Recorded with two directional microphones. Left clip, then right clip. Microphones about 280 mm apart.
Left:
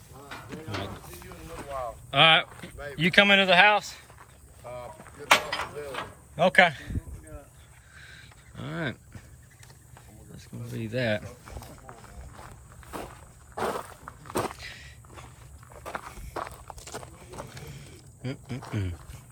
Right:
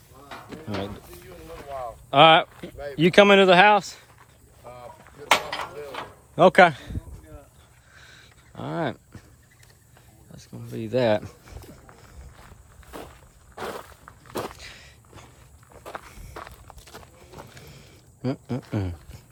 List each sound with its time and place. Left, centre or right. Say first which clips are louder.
0.3 s a sound: right 3 dB; right
2.0 s speech: right 5 dB; centre
2.7 s a sound: right 4 dB; right
3.0 s speech: right 5 dB; centre
4.7 s artillery fire: left 2 dB; centre
5.3 s a sound: even; right; by 9.0 s centre
10.3 s speech: right 3 dB; centre
11.9 s walk: left 3 dB; centre
13.6 s a sound: left 4 dB; centre
16.0 s walk: left 4 dB; centre
17.7 s ratchet: left 1 dB; centre
18.7 s speech: right 4 dB; centre